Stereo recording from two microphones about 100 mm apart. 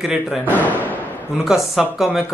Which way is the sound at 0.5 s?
15° left (ahead or behind).